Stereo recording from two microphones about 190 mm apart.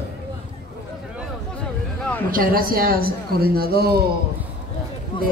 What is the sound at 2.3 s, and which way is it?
Speech, 50° right (ahead or behind).